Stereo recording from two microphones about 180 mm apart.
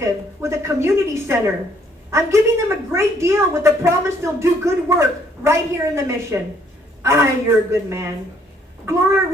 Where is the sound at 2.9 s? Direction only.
15° right (ahead or behind).